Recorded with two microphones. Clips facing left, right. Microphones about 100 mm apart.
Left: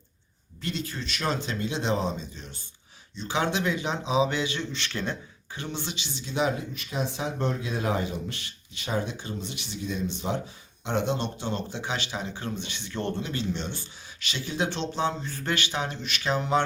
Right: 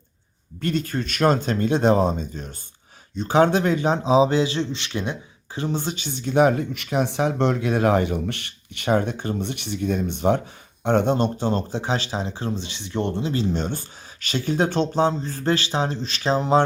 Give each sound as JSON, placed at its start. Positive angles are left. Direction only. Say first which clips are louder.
{"t": 0.6, "sound": "speech", "louder": "right 9 dB", "side_deg": -50}
{"t": 5.5, "sound": "speech", "louder": "right 8 dB", "side_deg": -40}
{"t": 13.3, "sound": "speech", "louder": "right 7 dB", "side_deg": -40}